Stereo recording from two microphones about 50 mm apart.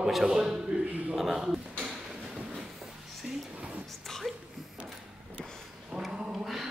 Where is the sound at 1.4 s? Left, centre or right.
Centre.